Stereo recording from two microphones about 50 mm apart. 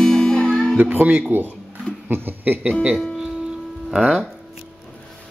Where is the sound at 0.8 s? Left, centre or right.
Right.